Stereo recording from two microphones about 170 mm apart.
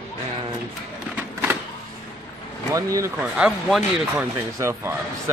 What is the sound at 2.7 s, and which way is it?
Speech, 20° right (ahead or behind).